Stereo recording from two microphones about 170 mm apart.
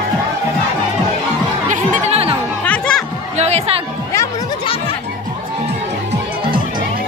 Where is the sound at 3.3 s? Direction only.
40° right (ahead or behind).